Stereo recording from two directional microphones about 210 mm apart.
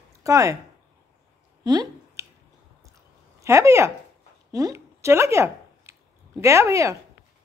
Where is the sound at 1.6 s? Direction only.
20° right (ahead or behind).